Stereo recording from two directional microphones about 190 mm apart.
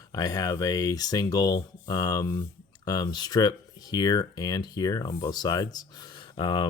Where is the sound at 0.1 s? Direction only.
20° left (ahead or behind).